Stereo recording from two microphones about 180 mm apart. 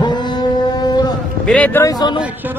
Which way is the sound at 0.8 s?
25° left (ahead or behind).